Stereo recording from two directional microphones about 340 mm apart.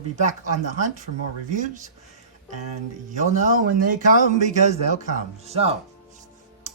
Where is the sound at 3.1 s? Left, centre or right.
Right.